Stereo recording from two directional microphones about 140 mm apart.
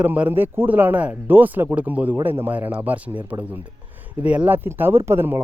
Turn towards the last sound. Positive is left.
turn(degrees=-15)  # may be behind; listen again after turning